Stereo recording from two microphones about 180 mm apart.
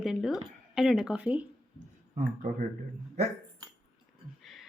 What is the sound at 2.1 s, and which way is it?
Speech, 45° right (ahead or behind).